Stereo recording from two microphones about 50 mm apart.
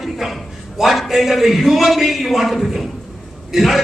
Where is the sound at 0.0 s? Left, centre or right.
Centre.